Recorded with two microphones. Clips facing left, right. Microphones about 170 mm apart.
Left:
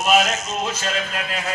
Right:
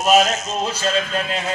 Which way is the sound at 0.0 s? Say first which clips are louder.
Right 3 dB; 35° right (ahead or behind).